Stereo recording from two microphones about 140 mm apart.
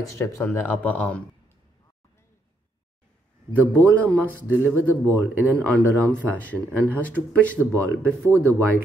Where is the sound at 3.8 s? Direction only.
10° left (ahead or behind).